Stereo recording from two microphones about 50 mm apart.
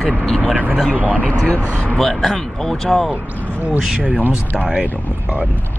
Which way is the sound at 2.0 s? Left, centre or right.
Centre.